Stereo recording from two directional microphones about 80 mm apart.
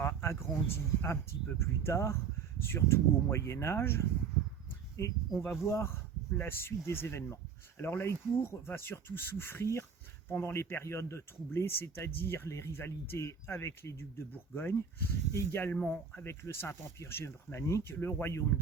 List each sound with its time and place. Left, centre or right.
0.0 s speech: left
15.7 s speech: centre
16.1 s speech: left